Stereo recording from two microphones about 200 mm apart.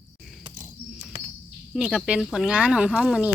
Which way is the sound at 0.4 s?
20° right (ahead or behind).